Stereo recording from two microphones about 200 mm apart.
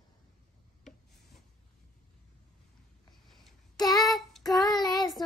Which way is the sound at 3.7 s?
20° left (ahead or behind).